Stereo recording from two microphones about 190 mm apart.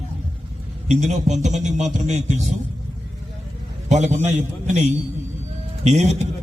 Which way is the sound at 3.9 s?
40° right (ahead or behind).